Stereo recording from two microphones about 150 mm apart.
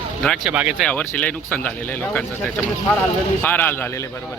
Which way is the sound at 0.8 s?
5° left (ahead or behind).